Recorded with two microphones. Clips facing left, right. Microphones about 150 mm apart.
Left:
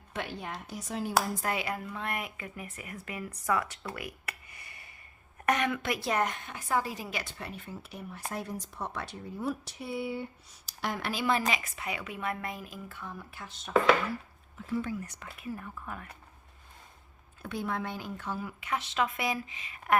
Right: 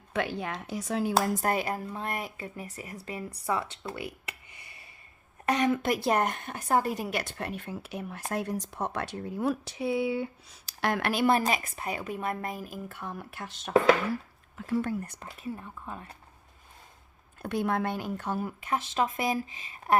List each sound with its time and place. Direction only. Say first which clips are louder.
0.2 s speech: right 6 dB; 90° right
1.4 s a woman's voice: right 4 dB; 45° right (ahead or behind); by 10.2 s 90° right
10.7 s speech: right 6 dB; 75° right (ahead or behind); by 13.0 s 45° right (ahead or behind)
13.0 s a woman's voice: right 4 dB; 65° right (ahead or behind)
15.2 s speech: right 2 dB; 35° right (ahead or behind)
15.5 s speech: even; 25° right (ahead or behind)
17.5 s speech: right 6 dB; 60° right (ahead or behind); by 20.0 s 35° right (ahead or behind)